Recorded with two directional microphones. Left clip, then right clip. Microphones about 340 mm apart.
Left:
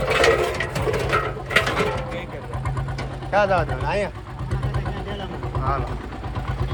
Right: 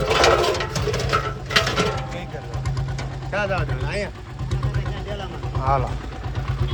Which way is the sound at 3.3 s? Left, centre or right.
Centre.